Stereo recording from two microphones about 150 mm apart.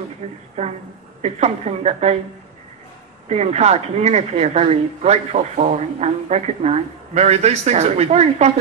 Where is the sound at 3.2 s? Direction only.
45° right (ahead or behind).